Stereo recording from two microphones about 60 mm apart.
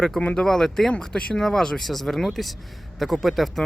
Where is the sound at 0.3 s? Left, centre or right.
Centre.